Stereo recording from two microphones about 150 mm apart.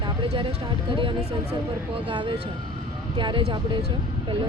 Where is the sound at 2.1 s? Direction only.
30° right (ahead or behind).